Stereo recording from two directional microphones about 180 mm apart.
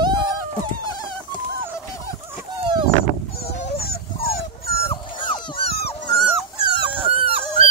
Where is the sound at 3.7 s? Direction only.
55° left (ahead or behind).